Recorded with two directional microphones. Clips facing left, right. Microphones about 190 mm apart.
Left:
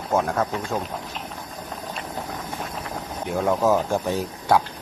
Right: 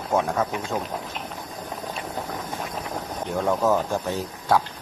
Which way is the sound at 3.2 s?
5° left (ahead or behind).